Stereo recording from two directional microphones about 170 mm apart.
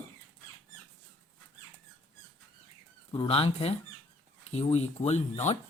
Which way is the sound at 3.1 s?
35° left (ahead or behind).